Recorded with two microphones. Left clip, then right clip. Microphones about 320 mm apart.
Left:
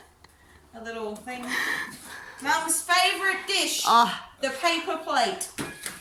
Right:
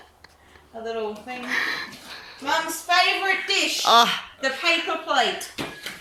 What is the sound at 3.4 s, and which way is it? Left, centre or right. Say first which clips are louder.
Speech: right 3 dB; centre.